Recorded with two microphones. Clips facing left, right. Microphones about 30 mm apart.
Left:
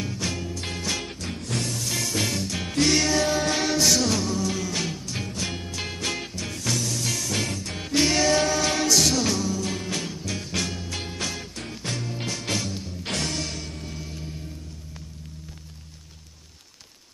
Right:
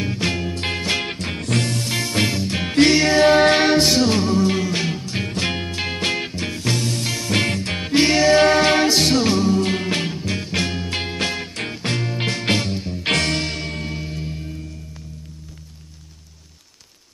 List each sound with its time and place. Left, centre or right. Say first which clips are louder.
0.0 s music: right 7 dB; right
1.9 s music: right 6 dB; right
3.2 s music: right 10 dB; right
5.3 s music: right 8 dB; right
5.8 s music: right 6 dB; right
7.1 s music: right 4 dB; right
7.3 s music: right 8 dB; right
7.8 s music: right 6 dB; right
8.4 s music: right 9 dB; right
9.6 s music: right 8 dB; right
13.4 s music: right 7 dB; right
14.0 s music: right 7 dB; right